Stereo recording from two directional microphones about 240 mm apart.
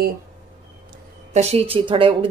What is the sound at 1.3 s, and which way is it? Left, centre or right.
Speech, right.